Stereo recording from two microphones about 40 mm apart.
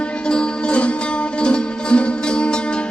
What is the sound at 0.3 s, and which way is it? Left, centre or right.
Music, left.